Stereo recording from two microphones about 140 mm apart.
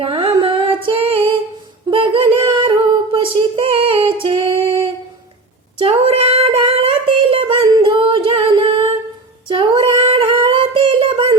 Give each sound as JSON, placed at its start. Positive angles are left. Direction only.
{"t": 0.0, "sound": "music", "side_deg": -40}
{"t": 1.9, "sound": "singing", "side_deg": -40}
{"t": 5.8, "sound": "child singing", "side_deg": -40}
{"t": 9.5, "sound": "singing", "side_deg": -35}